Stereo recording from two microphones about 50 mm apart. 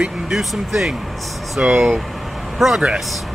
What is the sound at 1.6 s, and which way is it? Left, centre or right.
Speech, right.